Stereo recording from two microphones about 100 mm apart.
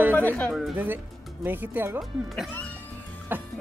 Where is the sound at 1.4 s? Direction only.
20° right (ahead or behind).